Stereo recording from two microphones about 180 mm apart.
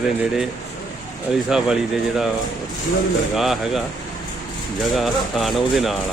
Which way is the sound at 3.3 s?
Centre (ahead or behind).